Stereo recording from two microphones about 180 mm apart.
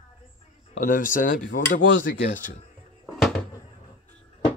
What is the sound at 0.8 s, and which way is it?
Speech, 50° left (ahead or behind).